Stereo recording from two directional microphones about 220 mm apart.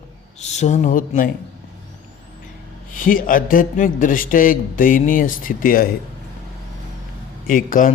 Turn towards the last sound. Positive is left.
turn(degrees=35)  # may be behind; listen again after turning